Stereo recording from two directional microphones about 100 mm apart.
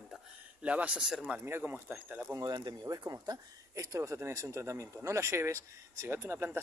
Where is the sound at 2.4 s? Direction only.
45° right (ahead or behind).